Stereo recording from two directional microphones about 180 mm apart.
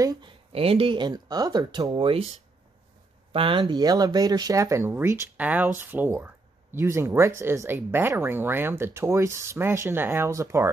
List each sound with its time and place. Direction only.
0.0 s speech: 20° right (ahead or behind)
0.5 s speech: 30° right (ahead or behind)
3.3 s speech: 30° right (ahead or behind)